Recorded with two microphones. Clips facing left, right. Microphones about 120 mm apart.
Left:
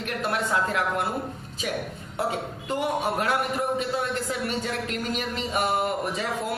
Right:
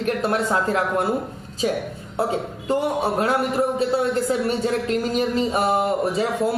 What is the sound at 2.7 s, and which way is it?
A man's voice, 35° right (ahead or behind).